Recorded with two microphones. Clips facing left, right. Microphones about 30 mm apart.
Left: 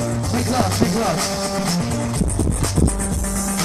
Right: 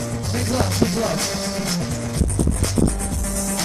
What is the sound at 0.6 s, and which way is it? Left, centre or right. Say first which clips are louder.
Speech: even; centre.